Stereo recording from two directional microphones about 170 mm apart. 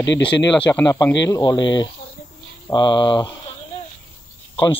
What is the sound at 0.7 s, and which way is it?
Speech, 20° left (ahead or behind).